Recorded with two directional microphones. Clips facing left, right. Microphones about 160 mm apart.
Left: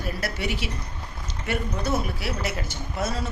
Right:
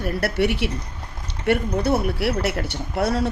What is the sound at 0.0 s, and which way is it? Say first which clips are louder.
A woman's voice: right 8 dB; 60° right (ahead or behind).